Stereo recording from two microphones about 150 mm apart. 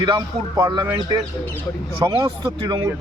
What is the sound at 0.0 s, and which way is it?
Speech, 30° right (ahead or behind).